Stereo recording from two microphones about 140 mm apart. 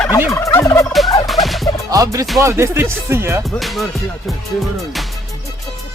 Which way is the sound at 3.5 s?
Centre (ahead or behind).